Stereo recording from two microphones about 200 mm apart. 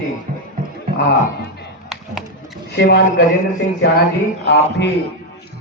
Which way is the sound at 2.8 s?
60° left (ahead or behind).